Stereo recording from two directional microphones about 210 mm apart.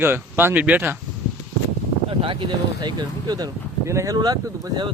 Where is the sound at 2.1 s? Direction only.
25° right (ahead or behind).